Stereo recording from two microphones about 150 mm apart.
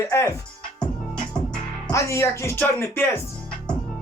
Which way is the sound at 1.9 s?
20° left (ahead or behind).